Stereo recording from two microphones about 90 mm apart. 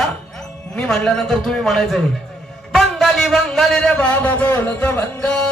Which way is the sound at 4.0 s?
20° left (ahead or behind).